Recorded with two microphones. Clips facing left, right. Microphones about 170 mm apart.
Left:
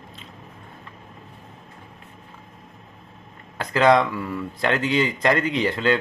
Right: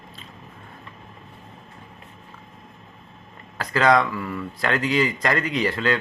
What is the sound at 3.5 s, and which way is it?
Speech, 20° left (ahead or behind).